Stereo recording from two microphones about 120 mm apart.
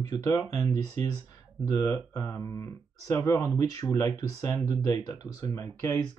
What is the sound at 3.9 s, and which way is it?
Speech, 15° left (ahead or behind).